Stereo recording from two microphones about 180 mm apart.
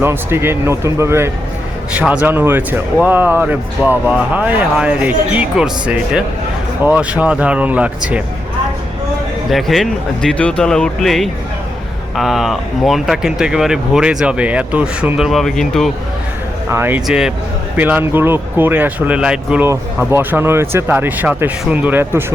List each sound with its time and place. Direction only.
0.0 s speech: 15° right (ahead or behind)
9.5 s speech: centre (ahead or behind)
16.6 s speech: 15° right (ahead or behind)